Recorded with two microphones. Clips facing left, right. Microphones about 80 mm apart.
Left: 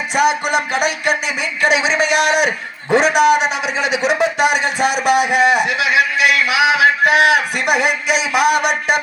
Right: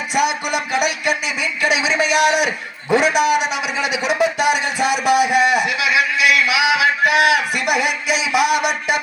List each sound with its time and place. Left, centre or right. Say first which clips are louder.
0.1 s a man's voice: left 4 dB; left